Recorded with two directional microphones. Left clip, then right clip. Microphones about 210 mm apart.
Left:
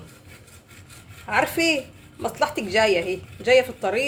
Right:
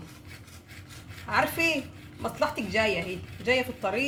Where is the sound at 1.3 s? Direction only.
45° left (ahead or behind).